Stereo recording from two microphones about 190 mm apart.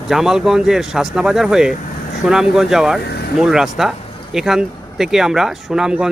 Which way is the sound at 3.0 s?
55° left (ahead or behind).